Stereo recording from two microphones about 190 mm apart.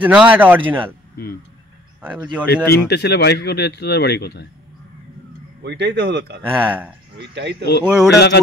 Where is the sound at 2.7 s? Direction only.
60° left (ahead or behind).